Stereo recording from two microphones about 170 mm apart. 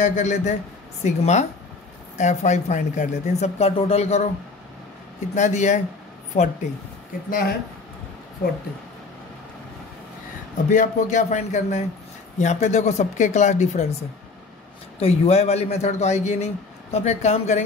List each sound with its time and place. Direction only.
0.0 s speech: 45° left (ahead or behind)
5.3 s a man's voice: 45° left (ahead or behind)
7.2 s speech: 60° left (ahead or behind)
10.7 s speech: 45° left (ahead or behind)
15.0 s a man's voice: 35° left (ahead or behind)